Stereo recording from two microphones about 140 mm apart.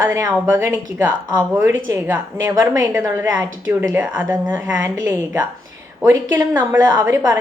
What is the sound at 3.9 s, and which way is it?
A woman's voice, 15° right (ahead or behind).